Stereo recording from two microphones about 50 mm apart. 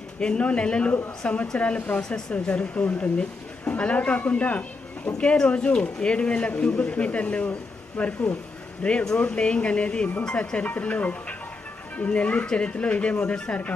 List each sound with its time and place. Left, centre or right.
0.2 s speech: left
2.3 s speech: left
10.2 s speech: centre
10.6 s speech: left